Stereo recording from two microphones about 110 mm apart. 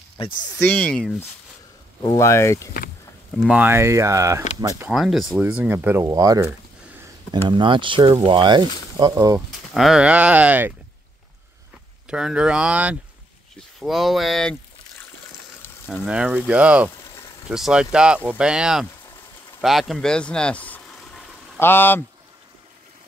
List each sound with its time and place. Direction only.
0.2 s speech: 55° left (ahead or behind)
0.7 s speech: 10° left (ahead or behind)
2.0 s speech: 30° left (ahead or behind)
3.4 s speech: 15° right (ahead or behind); by 4.8 s 30° right (ahead or behind)
4.9 s speech: centre (ahead or behind)
5.4 s speech: 15° right (ahead or behind)
6.0 s speech: 35° right (ahead or behind)
7.4 s speech: 45° right (ahead or behind)
9.8 s speech: 5° right (ahead or behind)
12.1 s speech: 10° right (ahead or behind)
13.7 s speech: centre (ahead or behind)
15.9 s speech: 10° right (ahead or behind); by 20.8 s 15° left (ahead or behind)
20.9 s a sound: centre (ahead or behind)
21.5 s speech: 20° left (ahead or behind)